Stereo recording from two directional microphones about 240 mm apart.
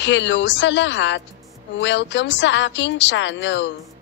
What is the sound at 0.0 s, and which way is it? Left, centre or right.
A woman's voice, left.